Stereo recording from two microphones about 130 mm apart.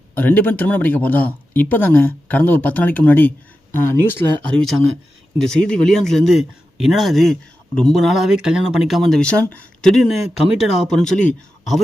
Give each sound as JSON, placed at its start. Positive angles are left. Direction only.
{"t": 0.2, "sound": "speech", "side_deg": 10}
{"t": 5.4, "sound": "speech", "side_deg": 5}